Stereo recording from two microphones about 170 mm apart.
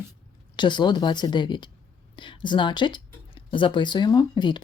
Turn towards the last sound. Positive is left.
turn(degrees=25)  # may be behind; listen again after turning